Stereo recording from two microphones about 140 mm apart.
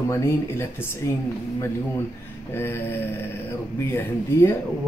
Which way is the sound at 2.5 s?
15° left (ahead or behind).